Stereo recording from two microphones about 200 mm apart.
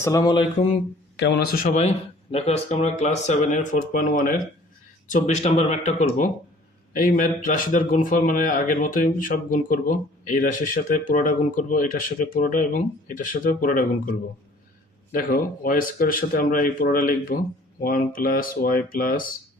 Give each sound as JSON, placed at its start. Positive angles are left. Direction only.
{"t": 0.0, "sound": "a sound", "side_deg": 15}
{"t": 1.2, "sound": "speech", "side_deg": 55}
{"t": 1.6, "sound": "a man's voice", "side_deg": 35}